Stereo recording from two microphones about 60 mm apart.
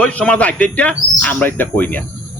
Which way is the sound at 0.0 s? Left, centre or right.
Left.